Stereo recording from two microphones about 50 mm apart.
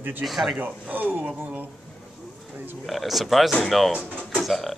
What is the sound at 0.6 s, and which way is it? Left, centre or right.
Speech, right.